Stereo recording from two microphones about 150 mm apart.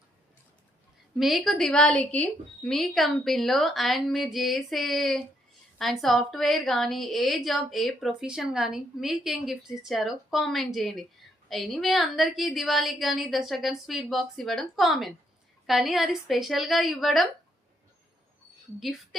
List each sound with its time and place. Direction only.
1.2 s a woman's voice: centre (ahead or behind)